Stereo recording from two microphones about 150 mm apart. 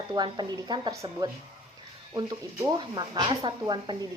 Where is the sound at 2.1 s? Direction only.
25° right (ahead or behind).